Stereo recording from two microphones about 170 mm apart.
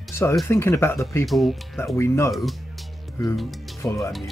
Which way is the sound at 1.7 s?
15° left (ahead or behind).